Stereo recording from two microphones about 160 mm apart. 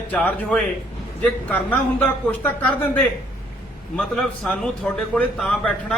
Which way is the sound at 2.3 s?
10° left (ahead or behind).